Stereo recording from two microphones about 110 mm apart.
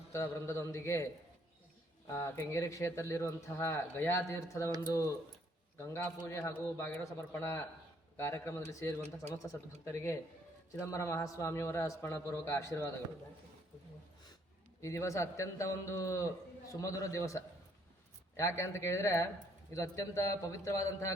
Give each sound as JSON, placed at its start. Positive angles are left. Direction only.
{"t": 0.1, "sound": "speech", "side_deg": 25}
{"t": 2.0, "sound": "speech", "side_deg": 25}
{"t": 14.8, "sound": "speech", "side_deg": 25}